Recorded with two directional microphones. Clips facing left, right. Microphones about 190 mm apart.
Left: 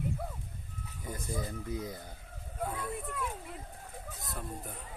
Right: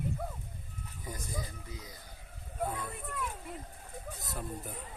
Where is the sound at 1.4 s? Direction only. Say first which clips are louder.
Left 9 dB; 55° left (ahead or behind).